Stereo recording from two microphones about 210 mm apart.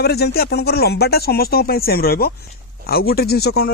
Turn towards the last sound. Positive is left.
turn(degrees=50)  # may be behind; listen again after turning